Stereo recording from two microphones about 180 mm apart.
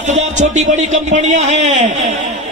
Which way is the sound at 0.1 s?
40° right (ahead or behind).